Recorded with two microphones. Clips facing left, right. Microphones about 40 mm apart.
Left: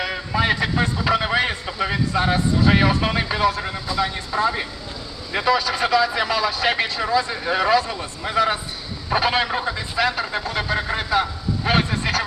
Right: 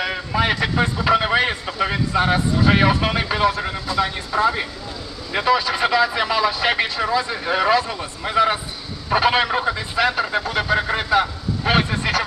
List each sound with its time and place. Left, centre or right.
0.0 s vehicle: centre
2.6 s speech: centre
11.6 s a sound: centre